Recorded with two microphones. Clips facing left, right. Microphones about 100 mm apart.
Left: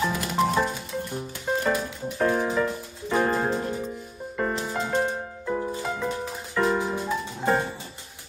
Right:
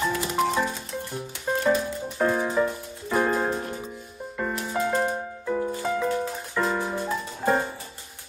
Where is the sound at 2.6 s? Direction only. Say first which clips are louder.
Right 2 dB; 15° right (ahead or behind).